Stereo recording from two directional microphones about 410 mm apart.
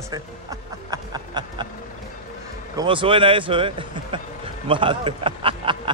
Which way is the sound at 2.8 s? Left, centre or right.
Centre.